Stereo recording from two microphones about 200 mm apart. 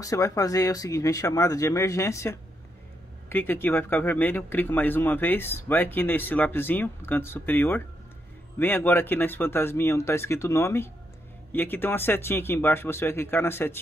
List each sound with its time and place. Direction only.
0.0 s speech: 15° left (ahead or behind)